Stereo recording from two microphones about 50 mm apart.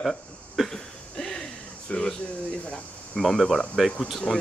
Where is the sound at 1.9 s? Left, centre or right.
Centre.